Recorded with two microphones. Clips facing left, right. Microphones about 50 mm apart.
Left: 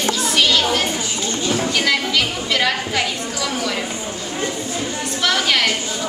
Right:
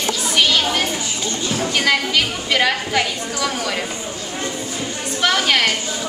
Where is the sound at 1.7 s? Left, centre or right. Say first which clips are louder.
Right 4 dB; centre.